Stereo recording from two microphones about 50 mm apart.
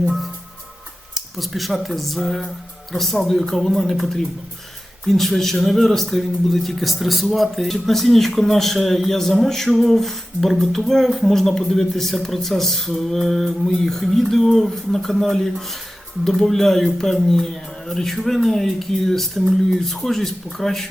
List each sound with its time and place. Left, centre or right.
1.1 s speech: centre